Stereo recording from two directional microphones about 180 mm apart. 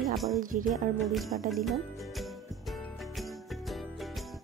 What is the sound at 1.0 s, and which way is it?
Music, centre (ahead or behind).